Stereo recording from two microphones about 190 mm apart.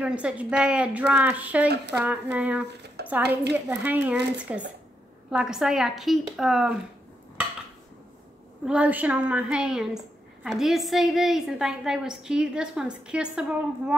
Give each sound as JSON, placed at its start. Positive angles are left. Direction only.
{"t": 0.0, "sound": "a woman's voice", "side_deg": -5}
{"t": 3.0, "sound": "a sound", "side_deg": -55}
{"t": 3.5, "sound": "a woman's voice", "side_deg": -10}
{"t": 8.6, "sound": "a woman's voice", "side_deg": -5}